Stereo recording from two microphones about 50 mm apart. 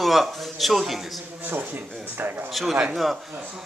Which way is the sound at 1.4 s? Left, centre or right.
Right.